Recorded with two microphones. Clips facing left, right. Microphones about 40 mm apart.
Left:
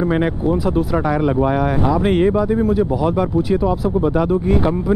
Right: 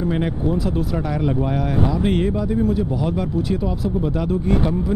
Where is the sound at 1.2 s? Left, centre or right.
Centre.